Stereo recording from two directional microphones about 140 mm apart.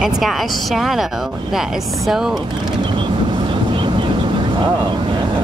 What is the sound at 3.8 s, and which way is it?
Vehicle, 35° right (ahead or behind).